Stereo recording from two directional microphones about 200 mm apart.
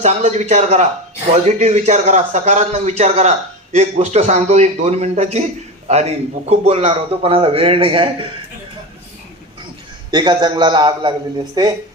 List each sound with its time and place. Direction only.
0.0 s a man's voice: 35° right (ahead or behind)
10.1 s a man's voice: 20° right (ahead or behind)